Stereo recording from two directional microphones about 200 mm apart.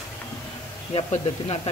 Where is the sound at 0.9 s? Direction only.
30° left (ahead or behind).